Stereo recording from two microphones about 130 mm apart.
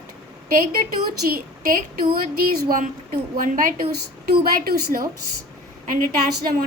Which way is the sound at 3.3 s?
90° right.